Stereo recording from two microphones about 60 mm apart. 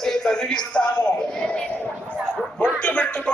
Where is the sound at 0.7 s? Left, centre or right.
Centre.